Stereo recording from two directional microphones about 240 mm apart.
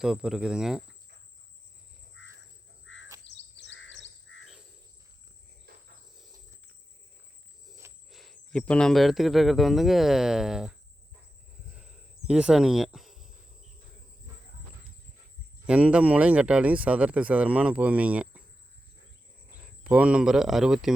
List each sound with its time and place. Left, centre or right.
0.0 s speech: centre
2.8 s insect: left
3.2 s chirp: left
8.1 s speech: centre
11.7 s a sound: centre
15.6 s speech: centre
19.8 s speech: centre